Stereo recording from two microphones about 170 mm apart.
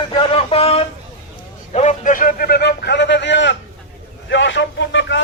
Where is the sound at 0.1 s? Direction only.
35° left (ahead or behind).